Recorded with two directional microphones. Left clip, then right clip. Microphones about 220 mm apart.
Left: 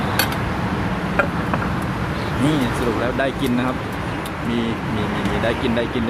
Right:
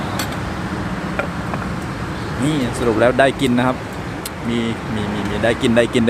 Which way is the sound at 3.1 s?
30° right (ahead or behind).